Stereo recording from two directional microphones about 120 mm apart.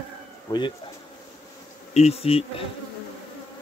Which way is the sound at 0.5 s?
40° left (ahead or behind).